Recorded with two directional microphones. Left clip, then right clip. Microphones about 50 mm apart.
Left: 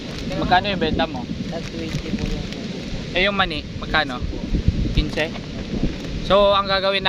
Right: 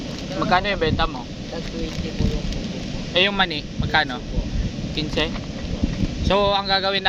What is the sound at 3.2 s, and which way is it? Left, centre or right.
Speech, centre.